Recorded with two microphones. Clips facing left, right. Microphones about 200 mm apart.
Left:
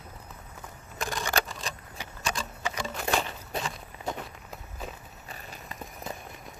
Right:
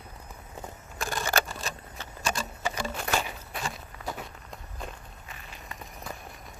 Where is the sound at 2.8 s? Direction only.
5° right (ahead or behind).